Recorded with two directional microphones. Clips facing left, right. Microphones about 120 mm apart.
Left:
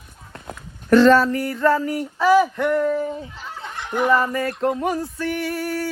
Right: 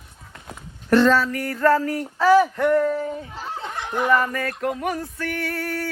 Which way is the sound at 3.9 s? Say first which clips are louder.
Left 2 dB; 25° left (ahead or behind).